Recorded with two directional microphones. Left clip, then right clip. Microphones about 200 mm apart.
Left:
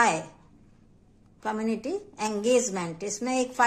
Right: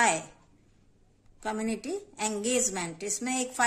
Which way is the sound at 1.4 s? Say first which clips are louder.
Left 3 dB; 25° right (ahead or behind).